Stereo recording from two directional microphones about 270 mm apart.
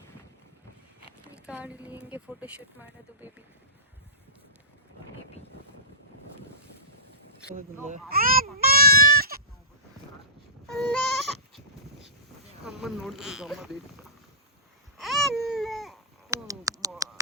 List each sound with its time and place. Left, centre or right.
1.5 s speech: centre
8.1 s speech: right
8.5 s sheep: right
10.7 s goat: centre
12.6 s speech: centre
14.9 s baby cry: centre
16.3 s a sound: centre